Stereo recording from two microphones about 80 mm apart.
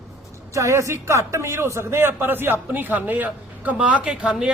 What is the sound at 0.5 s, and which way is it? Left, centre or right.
A man's voice, right.